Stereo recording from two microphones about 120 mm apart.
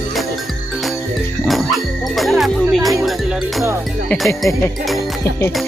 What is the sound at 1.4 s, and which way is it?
Music, centre (ahead or behind).